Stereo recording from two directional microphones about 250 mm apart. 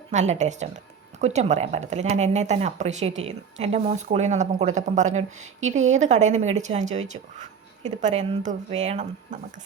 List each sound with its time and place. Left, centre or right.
0.1 s speech: right